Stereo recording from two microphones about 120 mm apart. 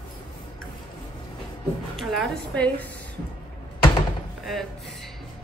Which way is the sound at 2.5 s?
10° left (ahead or behind).